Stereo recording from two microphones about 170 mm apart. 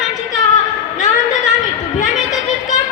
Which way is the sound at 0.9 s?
45° left (ahead or behind).